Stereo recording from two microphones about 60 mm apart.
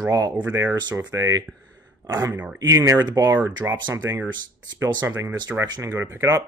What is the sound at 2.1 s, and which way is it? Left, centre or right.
Speech, right.